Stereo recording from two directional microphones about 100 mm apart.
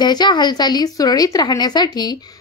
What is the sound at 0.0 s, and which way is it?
A woman's voice, 45° left (ahead or behind).